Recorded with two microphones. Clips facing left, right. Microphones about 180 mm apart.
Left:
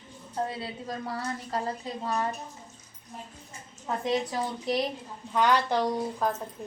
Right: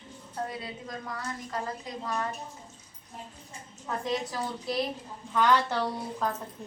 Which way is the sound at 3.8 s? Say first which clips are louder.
Left 3 dB; 20° left (ahead or behind).